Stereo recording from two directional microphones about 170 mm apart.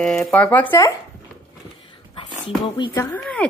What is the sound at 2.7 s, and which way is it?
Speech, 25° left (ahead or behind).